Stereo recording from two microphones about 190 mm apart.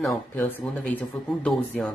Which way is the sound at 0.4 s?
10° left (ahead or behind).